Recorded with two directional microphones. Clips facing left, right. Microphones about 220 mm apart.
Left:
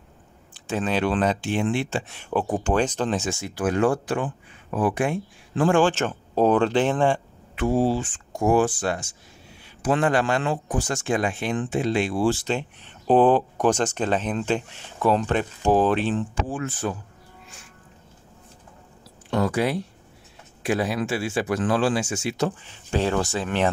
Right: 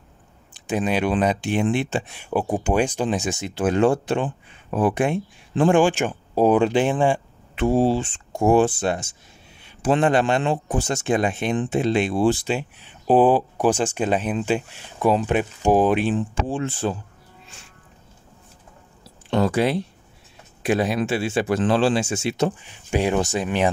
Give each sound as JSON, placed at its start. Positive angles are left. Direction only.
{"t": 0.6, "sound": "a man's voice", "side_deg": -15}
{"t": 7.5, "sound": "a man's voice", "side_deg": -25}
{"t": 16.3, "sound": "speech", "side_deg": -25}
{"t": 19.3, "sound": "speech", "side_deg": -25}
{"t": 22.6, "sound": "a man's voice", "side_deg": -15}